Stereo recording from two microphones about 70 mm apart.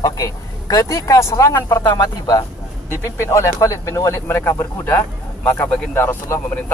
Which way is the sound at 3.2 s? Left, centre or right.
Left.